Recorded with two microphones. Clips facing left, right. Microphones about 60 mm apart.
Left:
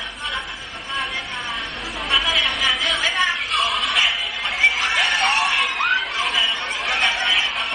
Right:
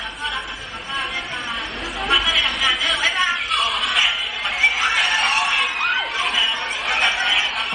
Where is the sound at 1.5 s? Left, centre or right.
Centre.